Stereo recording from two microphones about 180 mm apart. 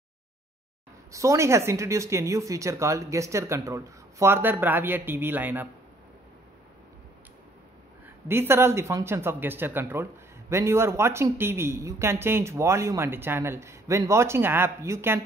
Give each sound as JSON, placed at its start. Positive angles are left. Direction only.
{"t": 1.1, "sound": "speech", "side_deg": -15}
{"t": 8.3, "sound": "speech", "side_deg": -15}